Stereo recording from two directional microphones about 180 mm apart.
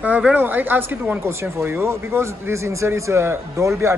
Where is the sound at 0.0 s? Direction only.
10° right (ahead or behind).